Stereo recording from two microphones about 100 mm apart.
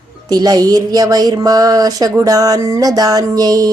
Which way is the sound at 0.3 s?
40° right (ahead or behind).